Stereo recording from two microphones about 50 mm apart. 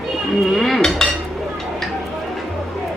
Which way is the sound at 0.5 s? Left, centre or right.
Centre.